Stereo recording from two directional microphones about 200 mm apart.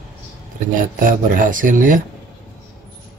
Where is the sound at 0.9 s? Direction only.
45° right (ahead or behind).